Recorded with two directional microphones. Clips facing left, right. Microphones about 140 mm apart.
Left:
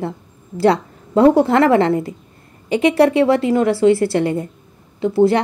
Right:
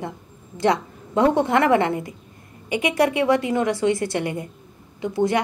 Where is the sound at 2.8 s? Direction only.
30° left (ahead or behind).